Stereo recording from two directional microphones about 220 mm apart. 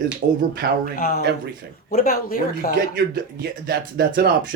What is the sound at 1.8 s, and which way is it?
Speech, 40° left (ahead or behind).